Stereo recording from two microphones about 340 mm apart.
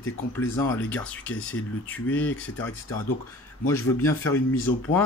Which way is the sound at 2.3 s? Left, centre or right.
Left.